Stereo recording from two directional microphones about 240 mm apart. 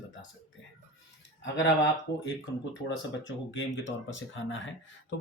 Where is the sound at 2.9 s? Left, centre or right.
Left.